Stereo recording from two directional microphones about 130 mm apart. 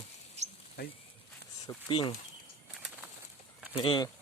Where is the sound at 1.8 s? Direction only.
45° left (ahead or behind).